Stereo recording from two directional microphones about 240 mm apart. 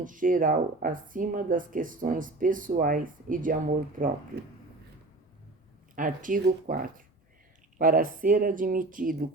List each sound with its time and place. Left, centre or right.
0.0 s speech: right
6.0 s speech: right